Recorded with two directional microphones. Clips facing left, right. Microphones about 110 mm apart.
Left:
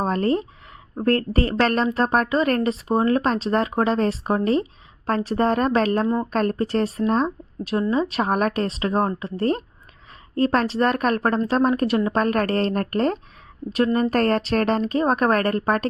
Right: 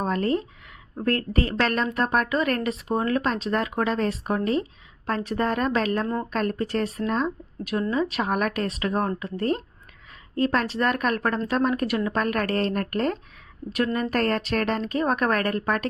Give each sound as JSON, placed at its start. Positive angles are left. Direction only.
{"t": 0.0, "sound": "speech", "side_deg": 35}
{"t": 10.3, "sound": "speech", "side_deg": 40}